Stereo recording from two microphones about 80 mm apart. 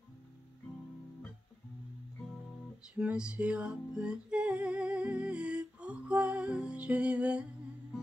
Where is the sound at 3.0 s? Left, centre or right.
Centre.